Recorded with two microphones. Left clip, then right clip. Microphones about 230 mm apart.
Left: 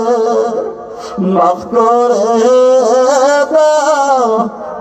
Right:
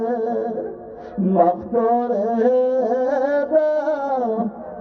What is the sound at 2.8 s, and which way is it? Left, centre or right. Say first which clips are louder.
Music: left 10 dB; centre.